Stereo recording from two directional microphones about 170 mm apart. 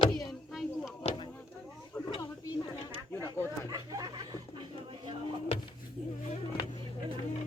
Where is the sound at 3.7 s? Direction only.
20° right (ahead or behind).